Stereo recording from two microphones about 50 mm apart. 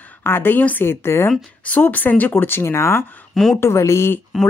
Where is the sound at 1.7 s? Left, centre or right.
Left.